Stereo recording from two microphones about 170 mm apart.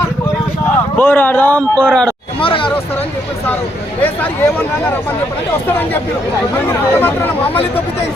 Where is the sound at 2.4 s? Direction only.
30° left (ahead or behind).